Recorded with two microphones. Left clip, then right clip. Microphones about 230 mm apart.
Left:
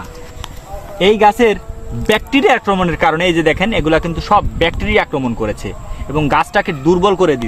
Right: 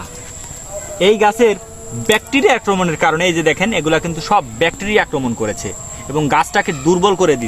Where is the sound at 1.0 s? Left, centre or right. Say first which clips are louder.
Left 1 dB; left.